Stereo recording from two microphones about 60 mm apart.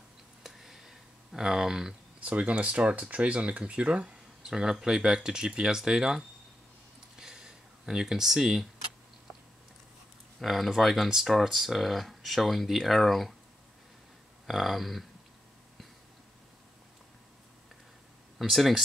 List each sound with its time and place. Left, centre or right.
0.4 s a sound: centre
2.1 s speech: right
7.2 s a sound: centre
10.4 s speech: centre
14.4 s speech: centre
18.4 s speech: centre